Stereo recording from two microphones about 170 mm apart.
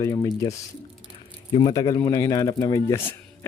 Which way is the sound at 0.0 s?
20° left (ahead or behind).